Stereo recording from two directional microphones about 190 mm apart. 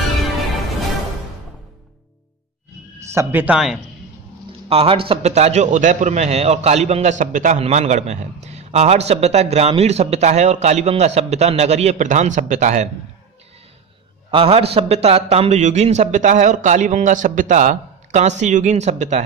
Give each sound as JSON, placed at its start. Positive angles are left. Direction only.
{"t": 3.1, "sound": "speech", "side_deg": -15}
{"t": 4.5, "sound": "a man's voice", "side_deg": -30}
{"t": 14.3, "sound": "a man's voice", "side_deg": -30}